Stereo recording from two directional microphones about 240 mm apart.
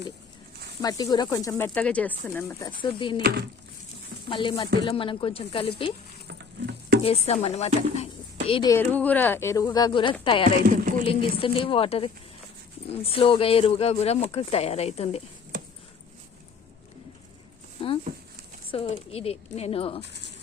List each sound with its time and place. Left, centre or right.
0.8 s speech: centre
4.3 s speech: centre
6.2 s patter: right
7.0 s speech: left
18.7 s speech: left